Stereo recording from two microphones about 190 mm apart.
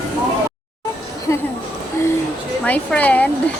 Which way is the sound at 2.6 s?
10° left (ahead or behind).